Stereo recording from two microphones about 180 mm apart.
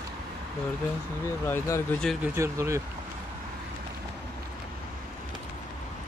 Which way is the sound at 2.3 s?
15° right (ahead or behind).